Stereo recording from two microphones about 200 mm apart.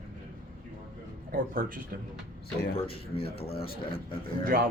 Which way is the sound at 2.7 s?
30° left (ahead or behind).